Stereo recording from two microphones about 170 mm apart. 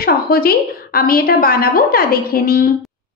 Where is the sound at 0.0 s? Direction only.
60° left (ahead or behind).